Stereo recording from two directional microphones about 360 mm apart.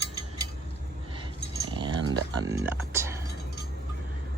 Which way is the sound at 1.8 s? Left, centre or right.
Centre.